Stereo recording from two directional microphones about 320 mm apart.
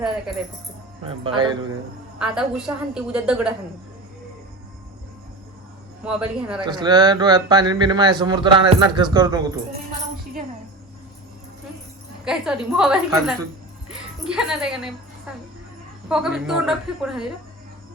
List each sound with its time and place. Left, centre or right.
1.0 s speech: centre
2.1 s a woman's voice: centre
6.1 s a woman's voice: centre
6.7 s speech: centre
12.2 s a woman's voice: centre